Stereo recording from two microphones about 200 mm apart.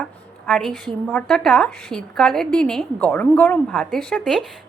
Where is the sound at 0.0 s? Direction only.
5° left (ahead or behind).